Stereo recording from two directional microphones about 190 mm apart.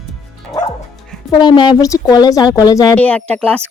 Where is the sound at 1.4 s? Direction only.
25° left (ahead or behind).